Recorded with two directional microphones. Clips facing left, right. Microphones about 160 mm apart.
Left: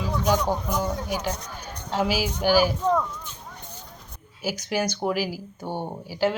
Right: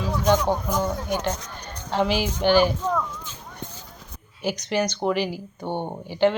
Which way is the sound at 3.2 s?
90° right.